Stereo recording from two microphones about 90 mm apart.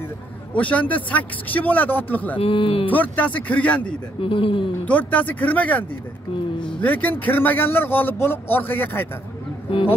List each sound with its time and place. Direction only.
0.6 s speech: 15° left (ahead or behind)
2.3 s speech: 75° left (ahead or behind)
2.9 s speech: 20° left (ahead or behind)
4.2 s speech: 80° left
4.8 s a man's voice: 20° left (ahead or behind)
9.7 s speech: 80° left